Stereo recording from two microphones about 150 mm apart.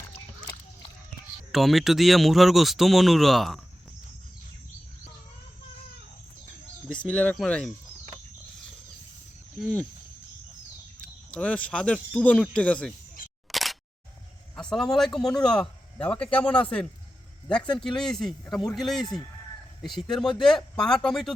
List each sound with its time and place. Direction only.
0.1 s a sound: 25° left (ahead or behind)
1.5 s speech: centre (ahead or behind)
7.1 s speech: 10° left (ahead or behind)
9.6 s speech: centre (ahead or behind)
11.3 s speech: 10° left (ahead or behind)
13.5 s single-lens reflex camera: centre (ahead or behind)
14.5 s speech: 5° left (ahead or behind)
17.8 s speech: 5° left (ahead or behind)